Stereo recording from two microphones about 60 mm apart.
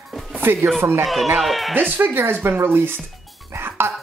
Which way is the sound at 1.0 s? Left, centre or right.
Centre.